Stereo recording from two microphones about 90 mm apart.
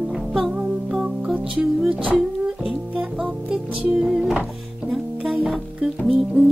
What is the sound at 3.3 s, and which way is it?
Music, 15° right (ahead or behind).